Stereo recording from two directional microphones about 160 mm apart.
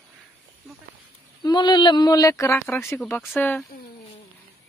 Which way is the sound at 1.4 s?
25° left (ahead or behind).